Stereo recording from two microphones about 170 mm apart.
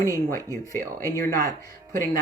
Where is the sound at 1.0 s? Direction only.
15° left (ahead or behind).